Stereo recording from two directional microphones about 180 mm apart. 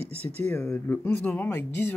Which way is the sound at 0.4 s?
5° left (ahead or behind).